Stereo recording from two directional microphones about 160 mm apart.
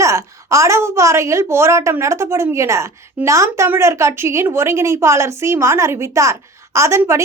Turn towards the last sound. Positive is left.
turn(degrees=-15)  # may be behind; listen again after turning